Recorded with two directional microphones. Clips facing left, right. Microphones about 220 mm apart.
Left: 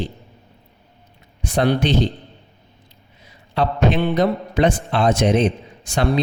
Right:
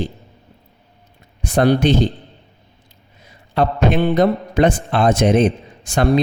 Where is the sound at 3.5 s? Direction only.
50° right (ahead or behind).